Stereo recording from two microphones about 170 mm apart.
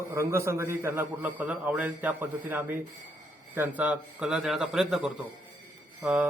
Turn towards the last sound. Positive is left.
turn(degrees=-10)  # may be behind; listen again after turning